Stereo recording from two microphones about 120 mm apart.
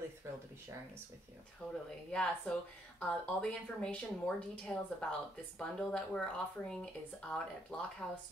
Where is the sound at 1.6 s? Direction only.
10° left (ahead or behind).